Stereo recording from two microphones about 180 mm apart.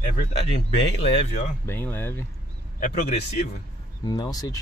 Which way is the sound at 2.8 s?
40° left (ahead or behind).